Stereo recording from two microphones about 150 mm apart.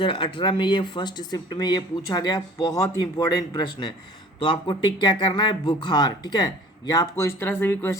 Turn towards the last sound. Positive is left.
turn(degrees=15)  # may be behind; listen again after turning